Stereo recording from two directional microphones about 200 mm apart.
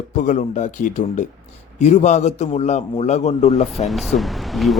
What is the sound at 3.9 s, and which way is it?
Speech, centre (ahead or behind).